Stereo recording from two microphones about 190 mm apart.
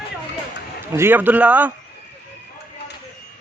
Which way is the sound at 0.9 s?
10° right (ahead or behind).